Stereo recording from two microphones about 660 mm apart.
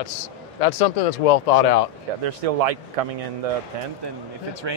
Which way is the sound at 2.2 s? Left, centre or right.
Right.